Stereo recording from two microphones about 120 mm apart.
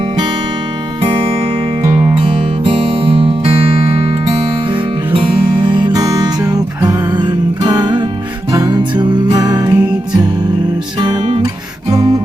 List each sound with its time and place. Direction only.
1.8 s music: 20° right (ahead or behind)
2.6 s music: 45° right (ahead or behind)
4.7 s music: 40° right (ahead or behind)
11.0 s music: 40° right (ahead or behind)